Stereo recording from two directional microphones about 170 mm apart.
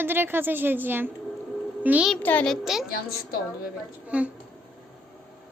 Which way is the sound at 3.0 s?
65° left (ahead or behind).